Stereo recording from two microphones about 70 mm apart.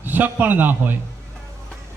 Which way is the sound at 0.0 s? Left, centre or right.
Right.